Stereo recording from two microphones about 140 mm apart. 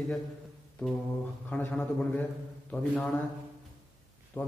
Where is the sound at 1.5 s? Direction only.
10° left (ahead or behind).